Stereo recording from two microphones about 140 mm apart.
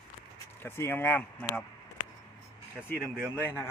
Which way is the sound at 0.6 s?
15° left (ahead or behind).